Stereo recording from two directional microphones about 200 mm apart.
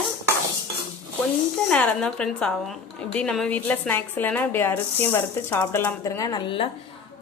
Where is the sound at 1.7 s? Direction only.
5° left (ahead or behind).